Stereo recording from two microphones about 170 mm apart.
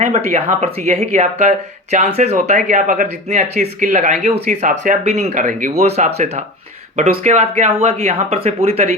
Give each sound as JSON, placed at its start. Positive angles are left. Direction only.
{"t": 0.0, "sound": "speech", "side_deg": -40}